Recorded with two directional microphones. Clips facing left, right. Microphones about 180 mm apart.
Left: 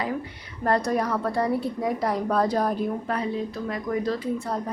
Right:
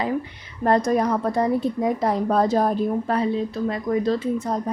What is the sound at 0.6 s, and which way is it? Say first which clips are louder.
A woman's voice: right 4 dB; 20° right (ahead or behind).